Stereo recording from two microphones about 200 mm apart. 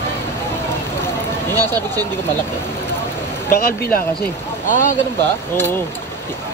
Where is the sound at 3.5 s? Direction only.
50° left (ahead or behind).